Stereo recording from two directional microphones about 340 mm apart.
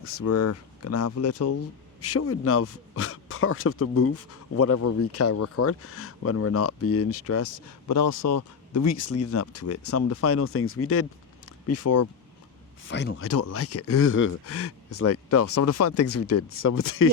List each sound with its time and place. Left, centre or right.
0.0 s speech: left
12.9 s speech: left